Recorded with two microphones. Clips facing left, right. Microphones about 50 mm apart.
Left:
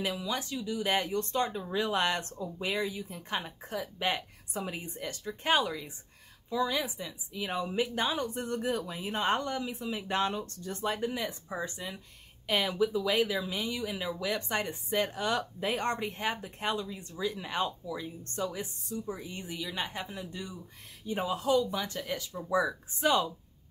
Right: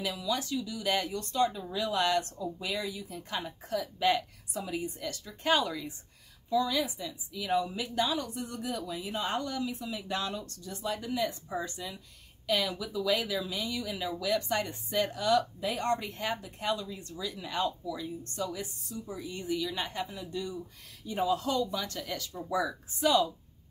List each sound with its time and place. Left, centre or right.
0.0 s speech: left
9.6 s speech: left
11.1 s speech: left
16.8 s speech: centre
17.1 s speech: left; by 20.1 s centre
20.1 s speech: left